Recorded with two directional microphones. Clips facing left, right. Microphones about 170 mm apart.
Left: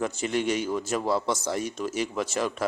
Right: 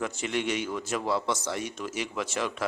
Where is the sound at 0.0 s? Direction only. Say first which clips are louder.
Left 3 dB; 40° left (ahead or behind).